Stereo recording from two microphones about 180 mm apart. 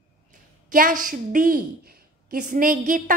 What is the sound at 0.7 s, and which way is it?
A woman's voice, 50° right (ahead or behind).